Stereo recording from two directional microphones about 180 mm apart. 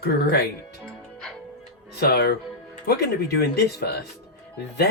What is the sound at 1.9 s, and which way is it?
Speech, 60° left (ahead or behind).